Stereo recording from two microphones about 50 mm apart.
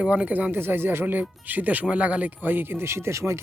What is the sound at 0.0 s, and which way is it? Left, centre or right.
Speech, right.